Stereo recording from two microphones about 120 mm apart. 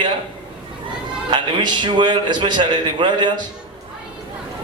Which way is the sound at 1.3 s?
40° right (ahead or behind).